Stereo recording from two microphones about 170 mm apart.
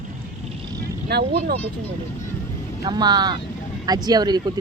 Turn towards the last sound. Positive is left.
turn(degrees=-25)  # may be behind; listen again after turning